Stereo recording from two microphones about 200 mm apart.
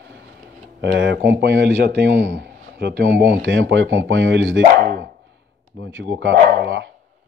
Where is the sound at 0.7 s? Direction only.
60° right (ahead or behind).